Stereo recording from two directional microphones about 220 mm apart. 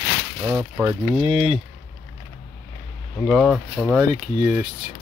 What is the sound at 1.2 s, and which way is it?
Speech, 25° right (ahead or behind).